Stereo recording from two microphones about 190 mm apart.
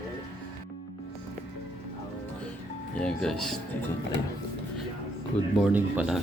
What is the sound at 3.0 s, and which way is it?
Speech, 5° left (ahead or behind).